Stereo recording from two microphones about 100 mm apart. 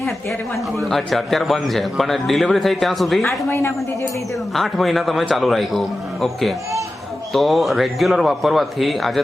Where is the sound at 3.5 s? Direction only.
25° left (ahead or behind).